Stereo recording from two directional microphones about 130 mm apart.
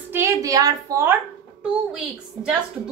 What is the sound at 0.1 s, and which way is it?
A woman's voice, 20° right (ahead or behind).